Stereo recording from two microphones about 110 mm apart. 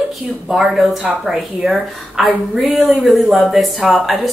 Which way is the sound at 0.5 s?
5° right (ahead or behind).